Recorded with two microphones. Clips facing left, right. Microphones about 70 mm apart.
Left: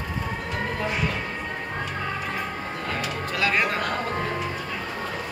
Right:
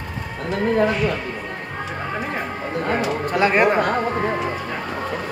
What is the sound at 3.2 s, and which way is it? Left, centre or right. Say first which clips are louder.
Music: right 6 dB; right.